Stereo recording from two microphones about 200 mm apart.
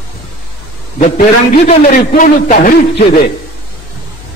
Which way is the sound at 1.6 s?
40° left (ahead or behind).